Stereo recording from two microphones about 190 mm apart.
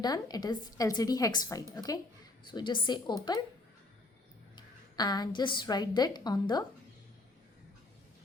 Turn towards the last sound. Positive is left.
turn(degrees=20)  # may be behind; listen again after turning